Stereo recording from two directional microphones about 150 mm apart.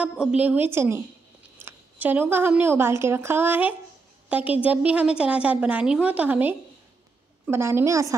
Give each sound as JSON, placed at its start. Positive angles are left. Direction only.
{"t": 0.0, "sound": "a woman's voice", "side_deg": -5}